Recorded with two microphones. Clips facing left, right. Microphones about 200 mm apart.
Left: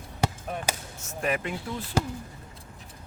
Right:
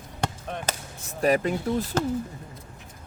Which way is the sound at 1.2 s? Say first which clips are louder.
Right 7 dB; 35° right (ahead or behind).